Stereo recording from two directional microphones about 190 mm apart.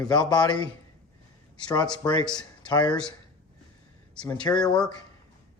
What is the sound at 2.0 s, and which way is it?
Speech, 20° left (ahead or behind).